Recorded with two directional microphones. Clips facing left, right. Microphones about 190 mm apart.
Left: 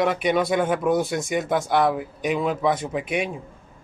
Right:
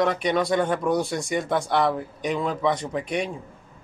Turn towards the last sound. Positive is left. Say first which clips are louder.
# left 1 dB
turn(degrees=5)  # may be behind; listen again after turning